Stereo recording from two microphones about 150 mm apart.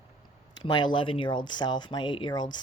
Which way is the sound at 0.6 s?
30° left (ahead or behind).